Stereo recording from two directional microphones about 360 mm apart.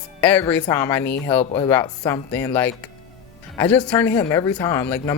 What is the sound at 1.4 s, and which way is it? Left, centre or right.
Speech, centre.